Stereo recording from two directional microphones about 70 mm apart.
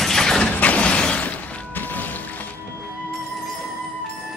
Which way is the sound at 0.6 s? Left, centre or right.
Centre.